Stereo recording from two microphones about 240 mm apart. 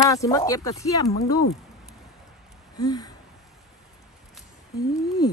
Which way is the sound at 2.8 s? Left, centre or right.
Centre.